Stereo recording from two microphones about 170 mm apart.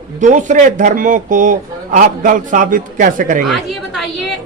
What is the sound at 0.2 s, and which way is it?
Speech, 45° right (ahead or behind).